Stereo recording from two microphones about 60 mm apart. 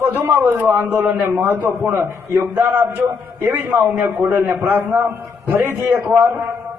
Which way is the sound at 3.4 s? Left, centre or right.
Right.